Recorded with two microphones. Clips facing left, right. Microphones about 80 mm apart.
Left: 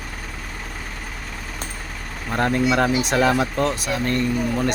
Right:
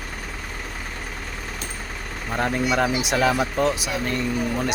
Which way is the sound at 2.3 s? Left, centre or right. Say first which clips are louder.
Left 3 dB; centre.